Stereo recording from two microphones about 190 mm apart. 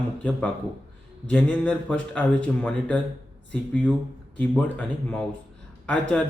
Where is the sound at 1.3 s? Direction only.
5° left (ahead or behind).